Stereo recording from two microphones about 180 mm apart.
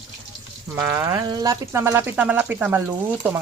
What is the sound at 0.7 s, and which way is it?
Speech, 10° right (ahead or behind).